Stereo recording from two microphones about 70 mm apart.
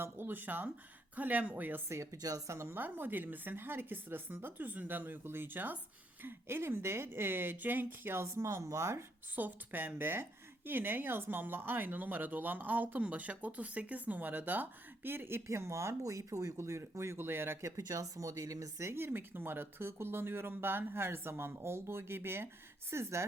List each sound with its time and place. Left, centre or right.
0.0 s speech: right
2.5 s speech: right
9.3 s speech: right
15.4 s speech: right
17.8 s speech: right
18.9 s speech: right